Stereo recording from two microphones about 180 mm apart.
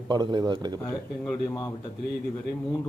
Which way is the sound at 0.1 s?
25° right (ahead or behind).